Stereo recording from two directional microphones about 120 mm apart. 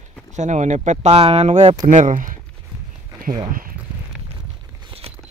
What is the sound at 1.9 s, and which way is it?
Speech, 90° right.